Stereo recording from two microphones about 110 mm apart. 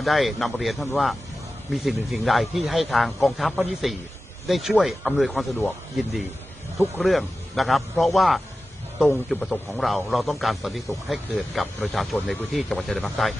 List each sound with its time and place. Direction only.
0.0 s a man's voice: centre (ahead or behind)